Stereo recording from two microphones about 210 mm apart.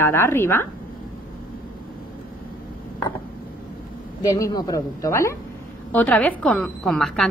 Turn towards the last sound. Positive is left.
turn(degrees=0)  # may be behind; listen again after turning